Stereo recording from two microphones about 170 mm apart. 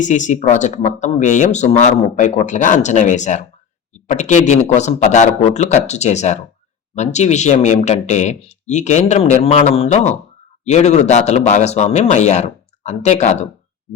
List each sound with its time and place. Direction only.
0.0 s speech: 45° left (ahead or behind)